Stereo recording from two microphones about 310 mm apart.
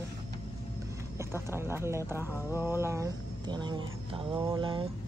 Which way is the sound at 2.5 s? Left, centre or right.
Centre.